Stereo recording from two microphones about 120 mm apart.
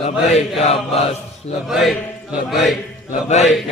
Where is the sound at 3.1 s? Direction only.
70° left (ahead or behind).